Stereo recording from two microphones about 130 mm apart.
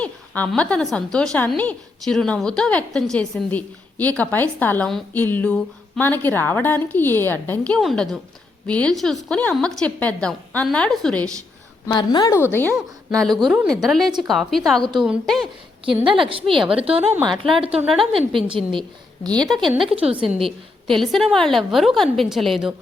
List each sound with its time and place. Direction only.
0.0 s a woman's voice: 10° left (ahead or behind)
11.9 s a woman's voice: 35° left (ahead or behind)
12.5 s a woman's voice: 15° left (ahead or behind)
13.4 s a woman's voice: centre (ahead or behind)
16.0 s a woman's voice: 40° right (ahead or behind)
19.3 s a woman's voice: 5° left (ahead or behind)
19.8 s a woman's voice: 45° right (ahead or behind)
20.8 s a woman's voice: centre (ahead or behind)